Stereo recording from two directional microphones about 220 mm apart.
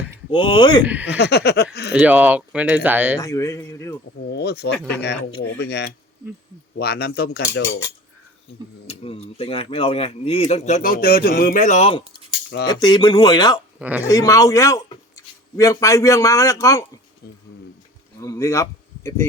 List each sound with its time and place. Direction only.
0.3 s speech: 25° left (ahead or behind)
1.0 s speech: 50° left (ahead or behind)
1.9 s speech: 5° right (ahead or behind)
3.2 s a man's voice: 15° left (ahead or behind)
4.3 s speech: 50° left (ahead or behind)
8.9 s speech: 25° left (ahead or behind)
13.7 s speech: 5° right (ahead or behind)
14.1 s a man's voice: 15° left (ahead or behind)
18.2 s a man's voice: 15° left (ahead or behind)